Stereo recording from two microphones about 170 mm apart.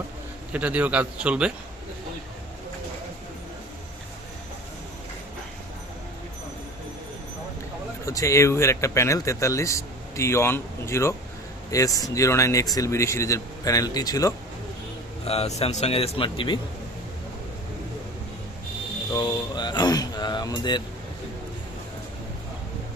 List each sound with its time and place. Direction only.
0.5 s a man's voice: 10° right (ahead or behind)
8.0 s speech: 20° left (ahead or behind)
15.2 s speech: 35° left (ahead or behind)
19.1 s speech: 25° left (ahead or behind)